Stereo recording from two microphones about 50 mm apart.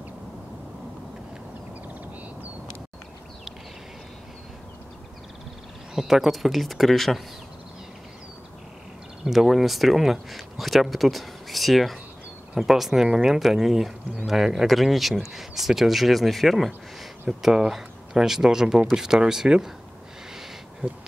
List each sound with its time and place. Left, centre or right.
5.9 s speech: centre
9.2 s speech: centre
17.3 s speech: centre
20.8 s speech: right